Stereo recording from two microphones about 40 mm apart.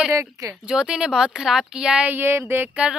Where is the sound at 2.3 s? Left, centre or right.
Right.